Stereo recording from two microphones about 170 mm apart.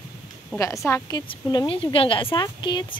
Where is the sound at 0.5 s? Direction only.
15° left (ahead or behind).